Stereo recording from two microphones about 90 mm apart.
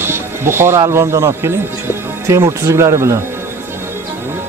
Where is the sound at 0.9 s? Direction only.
30° right (ahead or behind).